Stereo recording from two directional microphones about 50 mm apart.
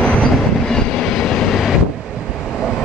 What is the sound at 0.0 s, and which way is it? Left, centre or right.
Train, left.